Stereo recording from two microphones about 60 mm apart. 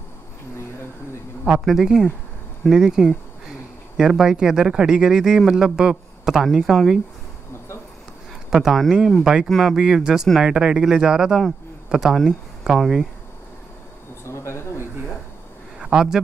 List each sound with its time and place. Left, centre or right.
1.6 s speech: centre
8.5 s speech: centre
9.2 s speech: centre
9.5 s speech: centre
9.8 s speech: centre
14.2 s a sound: left
15.8 s speech: centre